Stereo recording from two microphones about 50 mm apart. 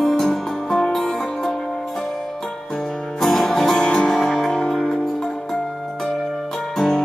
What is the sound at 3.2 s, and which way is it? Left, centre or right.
Music, centre.